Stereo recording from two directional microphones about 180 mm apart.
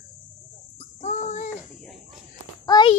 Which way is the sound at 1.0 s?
40° left (ahead or behind).